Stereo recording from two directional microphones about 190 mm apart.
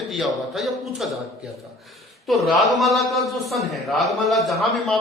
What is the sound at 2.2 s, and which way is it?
A man's voice, centre (ahead or behind).